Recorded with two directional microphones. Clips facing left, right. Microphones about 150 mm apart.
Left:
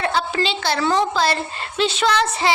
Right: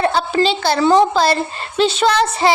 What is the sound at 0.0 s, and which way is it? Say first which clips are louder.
A woman's voice: right 5 dB; 35° right (ahead or behind).